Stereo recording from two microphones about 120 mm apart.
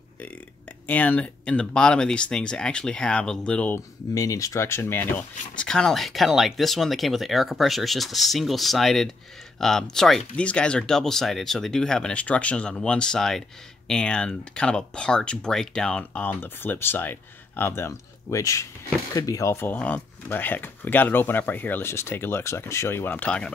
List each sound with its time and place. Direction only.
0.8 s speech: 15° left (ahead or behind)
4.1 s speech: 30° left (ahead or behind); by 23.5 s 10° left (ahead or behind)